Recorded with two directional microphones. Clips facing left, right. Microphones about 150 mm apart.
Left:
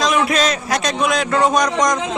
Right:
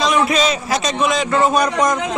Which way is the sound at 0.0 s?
Centre (ahead or behind).